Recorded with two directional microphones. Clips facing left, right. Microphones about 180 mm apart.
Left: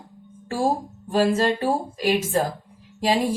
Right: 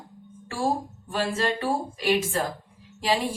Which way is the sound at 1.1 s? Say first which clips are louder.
Left 7 dB; 40° left (ahead or behind).